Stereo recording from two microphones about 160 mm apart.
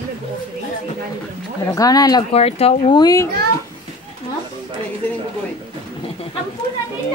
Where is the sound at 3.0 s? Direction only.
20° left (ahead or behind).